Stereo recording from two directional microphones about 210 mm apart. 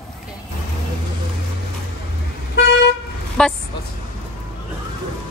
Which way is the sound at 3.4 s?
5° left (ahead or behind).